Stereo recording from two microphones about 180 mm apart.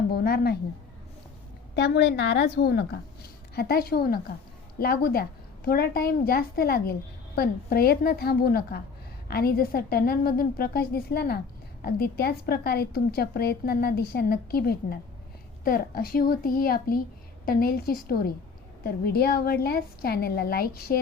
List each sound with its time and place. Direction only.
0.1 s a woman's voice: 60° left (ahead or behind)
1.7 s a woman's voice: 75° left (ahead or behind); by 21.0 s 55° left (ahead or behind)